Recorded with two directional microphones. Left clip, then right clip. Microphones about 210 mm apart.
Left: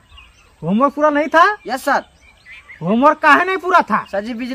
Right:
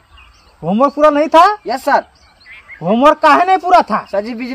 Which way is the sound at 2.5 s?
60° left (ahead or behind).